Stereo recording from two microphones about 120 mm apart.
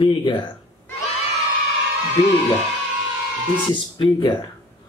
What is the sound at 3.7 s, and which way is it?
Speech, 45° left (ahead or behind).